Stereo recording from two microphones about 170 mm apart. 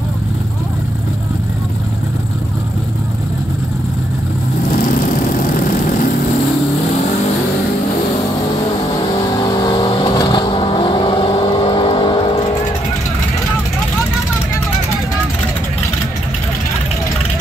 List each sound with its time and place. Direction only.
4.6 s vehicle: 50° left (ahead or behind)
9.4 s vehicle: 20° left (ahead or behind)